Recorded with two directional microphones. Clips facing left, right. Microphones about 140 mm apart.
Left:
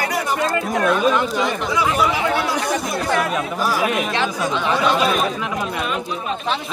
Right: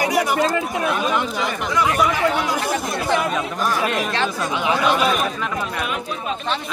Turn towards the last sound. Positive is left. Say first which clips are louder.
# left 1 dB
turn(degrees=-10)  # may be behind; listen again after turning